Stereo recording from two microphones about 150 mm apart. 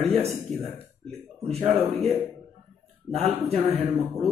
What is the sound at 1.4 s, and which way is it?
Speech, 40° right (ahead or behind).